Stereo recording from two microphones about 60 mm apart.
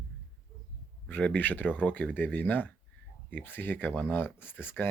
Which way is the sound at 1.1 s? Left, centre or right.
Left.